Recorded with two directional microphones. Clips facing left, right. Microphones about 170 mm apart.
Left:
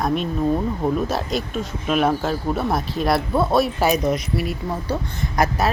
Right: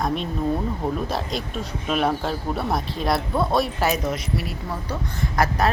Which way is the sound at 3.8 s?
15° left (ahead or behind).